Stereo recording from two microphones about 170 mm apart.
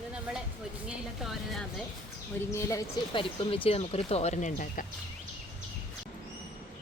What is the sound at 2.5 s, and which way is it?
Speech, 15° left (ahead or behind).